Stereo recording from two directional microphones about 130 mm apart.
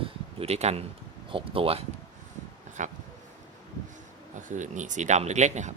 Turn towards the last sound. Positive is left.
turn(degrees=-65)  # may be behind; listen again after turning